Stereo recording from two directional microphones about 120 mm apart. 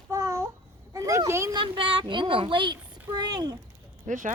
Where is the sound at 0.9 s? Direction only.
30° right (ahead or behind).